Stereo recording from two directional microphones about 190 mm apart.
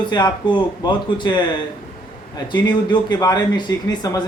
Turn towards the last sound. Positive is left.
turn(degrees=20)  # may be behind; listen again after turning